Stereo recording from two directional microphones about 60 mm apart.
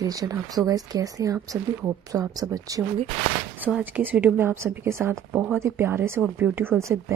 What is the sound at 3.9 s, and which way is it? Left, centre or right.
Speech, right.